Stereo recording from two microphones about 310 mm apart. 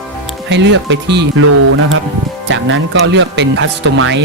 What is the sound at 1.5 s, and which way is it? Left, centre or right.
Speech, right.